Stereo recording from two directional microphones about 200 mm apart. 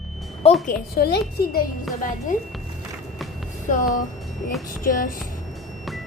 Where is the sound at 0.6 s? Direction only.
50° left (ahead or behind).